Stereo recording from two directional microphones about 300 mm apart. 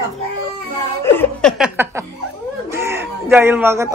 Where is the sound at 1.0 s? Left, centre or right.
Centre.